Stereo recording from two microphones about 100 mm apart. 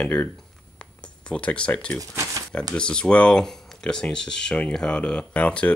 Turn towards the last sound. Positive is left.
turn(degrees=15)  # may be behind; listen again after turning